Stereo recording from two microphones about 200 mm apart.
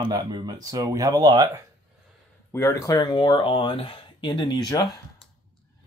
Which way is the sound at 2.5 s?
15° left (ahead or behind).